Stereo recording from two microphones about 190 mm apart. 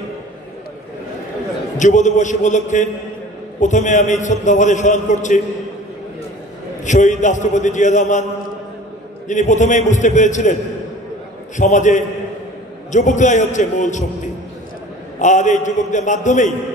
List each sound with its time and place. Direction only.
1.8 s a man's voice: 40° left (ahead or behind)
6.8 s a man's voice: 40° left (ahead or behind)
9.3 s a man's voice: 40° left (ahead or behind)
11.5 s a man's voice: 40° left (ahead or behind)
15.1 s a man's voice: 40° left (ahead or behind)